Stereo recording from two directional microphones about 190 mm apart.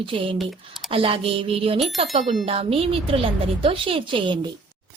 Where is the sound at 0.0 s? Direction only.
30° right (ahead or behind).